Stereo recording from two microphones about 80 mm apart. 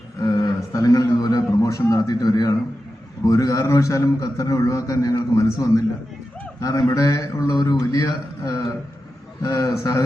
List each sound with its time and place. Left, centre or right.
0.2 s a man's voice: left